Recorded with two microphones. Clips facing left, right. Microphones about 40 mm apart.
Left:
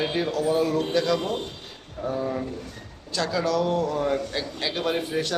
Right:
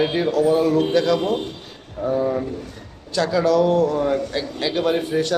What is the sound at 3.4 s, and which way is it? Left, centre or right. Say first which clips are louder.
A man's voice: right 8 dB; centre.